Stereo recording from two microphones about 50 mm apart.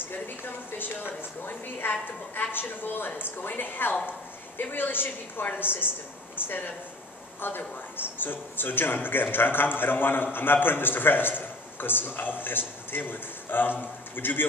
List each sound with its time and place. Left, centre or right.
0.7 s speech: left